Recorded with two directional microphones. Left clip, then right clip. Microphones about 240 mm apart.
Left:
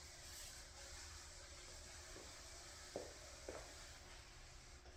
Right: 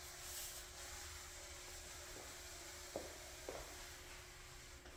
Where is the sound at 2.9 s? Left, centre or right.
Centre.